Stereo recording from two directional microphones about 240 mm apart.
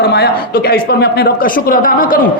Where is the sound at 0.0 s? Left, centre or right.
Left.